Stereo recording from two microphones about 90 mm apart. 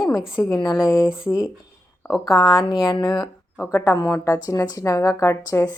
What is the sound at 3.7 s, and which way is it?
A woman's voice, 35° left (ahead or behind).